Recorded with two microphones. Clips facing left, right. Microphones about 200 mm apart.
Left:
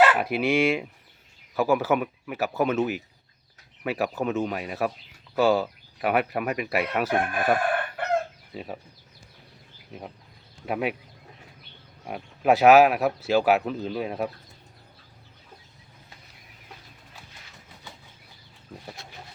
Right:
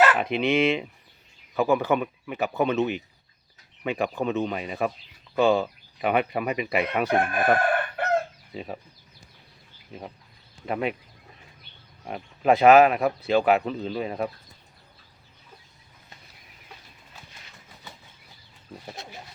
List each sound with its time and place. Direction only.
0.1 s speech: 5° left (ahead or behind)
10.7 s speech: 5° left (ahead or behind)
12.0 s speech: 5° left (ahead or behind)